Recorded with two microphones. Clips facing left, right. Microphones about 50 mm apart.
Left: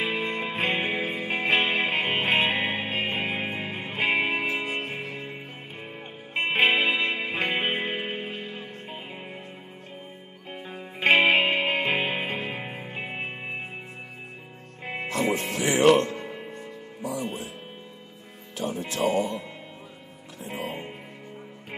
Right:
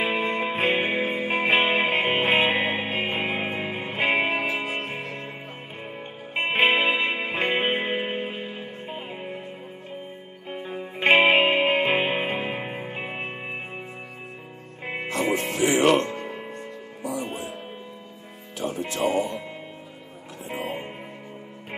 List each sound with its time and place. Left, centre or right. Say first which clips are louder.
0.0 s music: right 3 dB; centre
6.3 s music: right 1 dB; centre
10.5 s music: right 5 dB; centre
15.0 s music: right 1 dB; right
16.3 s music: right 3 dB; centre
17.0 s music: right 1 dB; right
18.6 s music: right 1 dB; right
20.4 s music: right 2 dB; right